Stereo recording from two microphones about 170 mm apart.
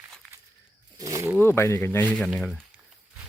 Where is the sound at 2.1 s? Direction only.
5° left (ahead or behind).